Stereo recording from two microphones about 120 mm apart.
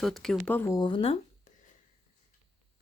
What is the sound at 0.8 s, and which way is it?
Speech, 45° left (ahead or behind).